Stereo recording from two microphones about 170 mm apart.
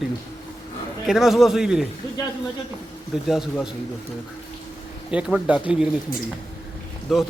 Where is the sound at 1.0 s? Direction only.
Centre (ahead or behind).